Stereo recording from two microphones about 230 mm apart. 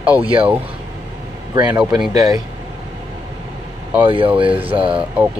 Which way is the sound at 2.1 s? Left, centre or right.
Centre.